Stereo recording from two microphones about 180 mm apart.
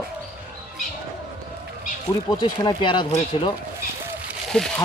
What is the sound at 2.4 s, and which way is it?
Speech, 25° left (ahead or behind).